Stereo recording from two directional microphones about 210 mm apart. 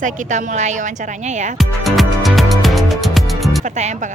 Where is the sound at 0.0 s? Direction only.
35° right (ahead or behind).